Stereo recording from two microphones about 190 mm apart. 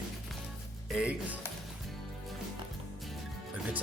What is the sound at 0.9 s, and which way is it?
Speech, 5° right (ahead or behind).